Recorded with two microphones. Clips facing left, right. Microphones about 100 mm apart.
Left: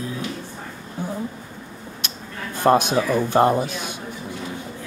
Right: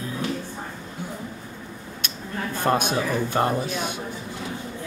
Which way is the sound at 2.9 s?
20° left (ahead or behind).